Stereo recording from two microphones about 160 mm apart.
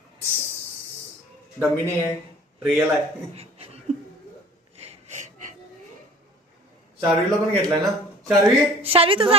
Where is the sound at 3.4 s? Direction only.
40° right (ahead or behind).